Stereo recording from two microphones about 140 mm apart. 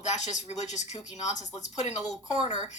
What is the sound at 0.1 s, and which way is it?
Speech, 55° left (ahead or behind).